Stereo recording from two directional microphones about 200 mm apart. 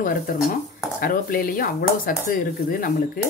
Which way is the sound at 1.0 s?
45° left (ahead or behind).